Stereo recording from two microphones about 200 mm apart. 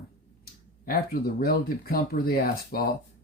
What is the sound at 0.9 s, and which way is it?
Speech, 45° left (ahead or behind).